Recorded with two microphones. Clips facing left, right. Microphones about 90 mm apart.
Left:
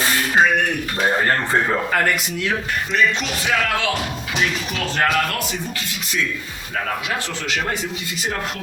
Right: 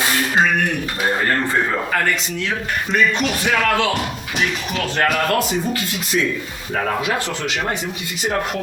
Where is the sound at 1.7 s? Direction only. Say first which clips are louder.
Left 1 dB; 5° left (ahead or behind).